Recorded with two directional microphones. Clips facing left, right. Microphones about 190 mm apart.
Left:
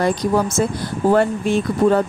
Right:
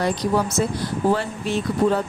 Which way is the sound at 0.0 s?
50° left (ahead or behind).